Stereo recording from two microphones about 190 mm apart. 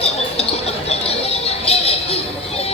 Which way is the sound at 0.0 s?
30° left (ahead or behind).